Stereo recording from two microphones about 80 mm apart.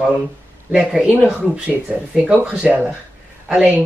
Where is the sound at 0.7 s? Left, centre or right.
Centre.